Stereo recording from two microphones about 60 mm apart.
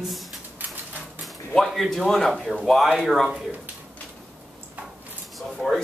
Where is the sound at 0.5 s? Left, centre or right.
Right.